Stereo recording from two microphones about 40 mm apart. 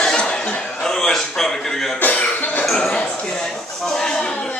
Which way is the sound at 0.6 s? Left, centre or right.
Centre.